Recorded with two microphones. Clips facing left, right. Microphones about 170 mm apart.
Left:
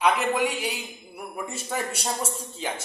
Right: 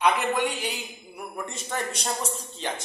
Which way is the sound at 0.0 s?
5° left (ahead or behind).